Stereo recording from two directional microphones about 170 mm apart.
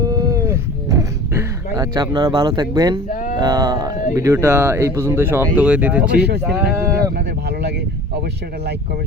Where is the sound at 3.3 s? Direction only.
20° right (ahead or behind).